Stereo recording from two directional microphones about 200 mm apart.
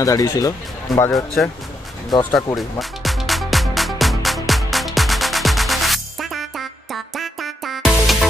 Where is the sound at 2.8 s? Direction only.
Centre (ahead or behind).